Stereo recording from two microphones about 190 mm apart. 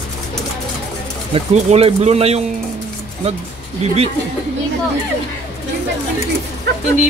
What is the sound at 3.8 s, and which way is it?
Speech, 35° right (ahead or behind).